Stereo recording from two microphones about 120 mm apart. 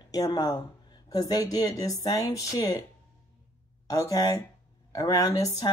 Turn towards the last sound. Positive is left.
turn(degrees=30)  # may be behind; listen again after turning